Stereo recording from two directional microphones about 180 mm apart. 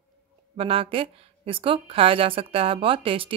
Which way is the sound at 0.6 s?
30° right (ahead or behind).